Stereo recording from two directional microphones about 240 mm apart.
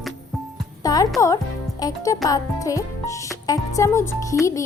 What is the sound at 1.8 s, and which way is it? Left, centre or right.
A child's voice, centre.